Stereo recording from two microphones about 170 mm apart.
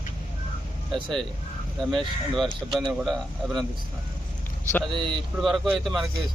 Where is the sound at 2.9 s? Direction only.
5° right (ahead or behind).